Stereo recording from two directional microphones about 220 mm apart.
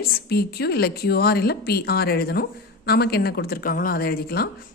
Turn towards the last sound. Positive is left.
turn(degrees=45)  # may be behind; listen again after turning